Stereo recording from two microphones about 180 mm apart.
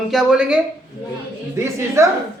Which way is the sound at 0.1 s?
Centre (ahead or behind).